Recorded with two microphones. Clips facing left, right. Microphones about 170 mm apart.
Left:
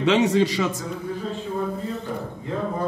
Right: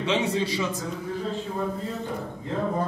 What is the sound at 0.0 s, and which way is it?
Speech, 75° left (ahead or behind).